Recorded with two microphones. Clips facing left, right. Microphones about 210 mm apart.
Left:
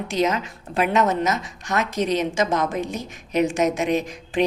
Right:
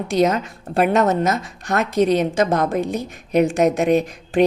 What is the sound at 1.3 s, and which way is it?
A woman's voice, 55° right (ahead or behind).